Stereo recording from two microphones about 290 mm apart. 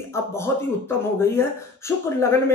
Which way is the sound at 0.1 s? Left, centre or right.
Centre.